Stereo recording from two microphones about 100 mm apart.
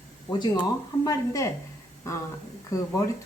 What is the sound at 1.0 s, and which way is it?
Speech, 40° left (ahead or behind).